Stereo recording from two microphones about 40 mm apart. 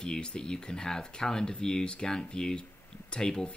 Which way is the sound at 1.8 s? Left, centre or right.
Left.